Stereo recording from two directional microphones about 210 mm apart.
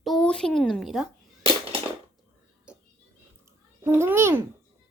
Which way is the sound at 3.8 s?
10° right (ahead or behind).